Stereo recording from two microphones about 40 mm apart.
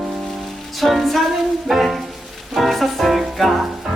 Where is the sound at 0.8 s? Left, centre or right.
Centre.